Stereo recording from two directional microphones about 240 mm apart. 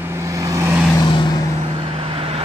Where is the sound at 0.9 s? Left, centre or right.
Centre.